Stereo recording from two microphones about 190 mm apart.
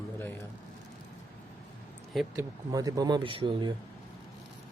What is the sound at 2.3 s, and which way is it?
Speech, 15° right (ahead or behind).